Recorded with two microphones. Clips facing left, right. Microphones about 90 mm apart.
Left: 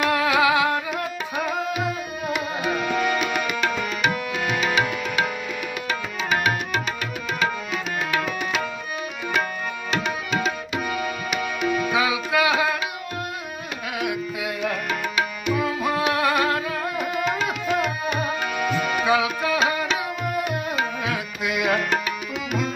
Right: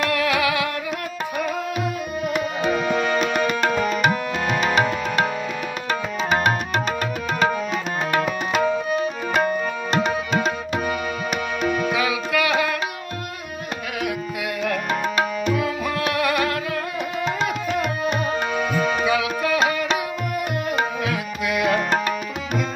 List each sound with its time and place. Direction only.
0.1 s music: 20° left (ahead or behind)
3.4 s music: 35° right (ahead or behind)
8.1 s tabla: 35° right (ahead or behind)
11.9 s music: 20° left (ahead or behind)
14.9 s tabla: 40° right (ahead or behind)
16.1 s music: 25° left (ahead or behind)
17.2 s tabla: 35° right (ahead or behind)
19.0 s tabla: 20° left (ahead or behind)
21.1 s tabla: 20° left (ahead or behind)